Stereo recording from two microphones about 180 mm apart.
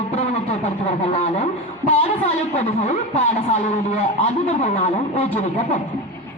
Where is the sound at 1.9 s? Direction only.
35° left (ahead or behind).